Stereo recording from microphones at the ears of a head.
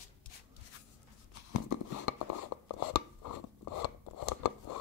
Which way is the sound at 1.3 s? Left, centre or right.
Left.